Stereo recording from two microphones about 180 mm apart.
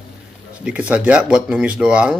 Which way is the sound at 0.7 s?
5° right (ahead or behind).